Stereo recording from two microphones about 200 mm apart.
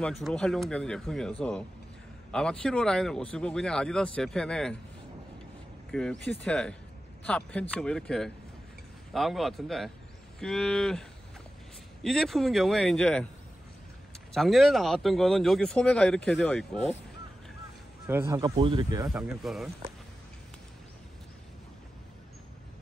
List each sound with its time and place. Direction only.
0.0 s speech: centre (ahead or behind)
2.3 s speech: 5° left (ahead or behind)
5.9 s speech: 5° left (ahead or behind)
14.3 s speech: centre (ahead or behind)
18.0 s speech: 10° right (ahead or behind)
18.6 s speech: 25° right (ahead or behind)
19.0 s speech: centre (ahead or behind)